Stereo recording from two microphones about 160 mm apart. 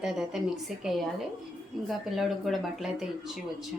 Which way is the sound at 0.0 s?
Centre (ahead or behind).